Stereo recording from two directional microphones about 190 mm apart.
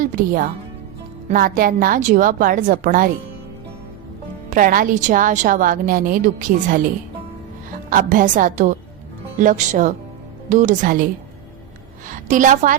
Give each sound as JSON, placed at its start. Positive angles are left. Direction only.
{"t": 0.0, "sound": "a woman's voice", "side_deg": -40}
{"t": 4.4, "sound": "a woman's voice", "side_deg": -45}
{"t": 7.9, "sound": "a woman's voice", "side_deg": -45}